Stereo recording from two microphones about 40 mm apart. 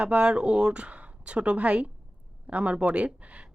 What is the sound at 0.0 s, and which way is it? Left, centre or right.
Speech, right.